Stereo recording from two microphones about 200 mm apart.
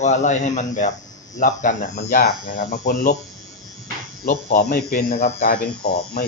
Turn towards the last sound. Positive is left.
turn(degrees=50)  # may be behind; listen again after turning